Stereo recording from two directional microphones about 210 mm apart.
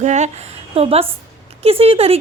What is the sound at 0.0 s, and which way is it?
A woman's voice, 35° right (ahead or behind).